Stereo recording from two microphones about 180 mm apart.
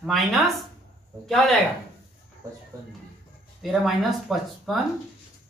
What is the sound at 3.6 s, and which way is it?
Speech, centre (ahead or behind).